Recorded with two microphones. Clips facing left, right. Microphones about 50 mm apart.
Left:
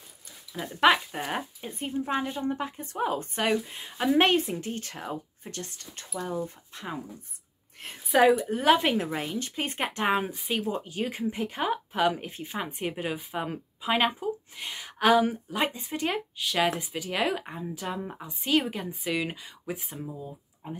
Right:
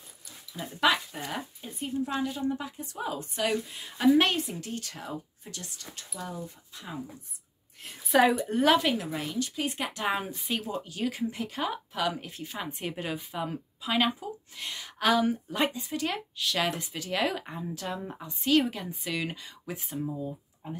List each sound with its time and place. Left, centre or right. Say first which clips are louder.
0.7 s speech: left 4 dB; left
3.6 s speech: right 4 dB; left
6.7 s speech: left 4 dB; left
8.1 s speech: left 2 dB; centre
8.7 s speech: left 1 dB; left
10.1 s speech: left 4 dB; centre
10.7 s speech: left 1 dB; left